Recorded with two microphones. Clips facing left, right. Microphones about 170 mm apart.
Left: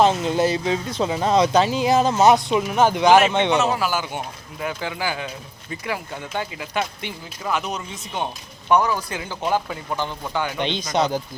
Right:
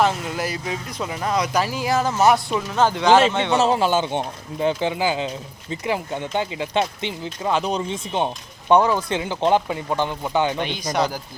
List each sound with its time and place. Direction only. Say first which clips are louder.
0.0 s speech: left 4 dB; 25° left (ahead or behind)
3.6 s speech: right 4 dB; 25° right (ahead or behind)
10.6 s speech: left 1 dB; 20° left (ahead or behind)